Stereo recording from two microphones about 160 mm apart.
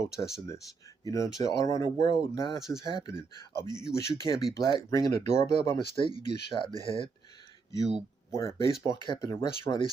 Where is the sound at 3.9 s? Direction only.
20° left (ahead or behind).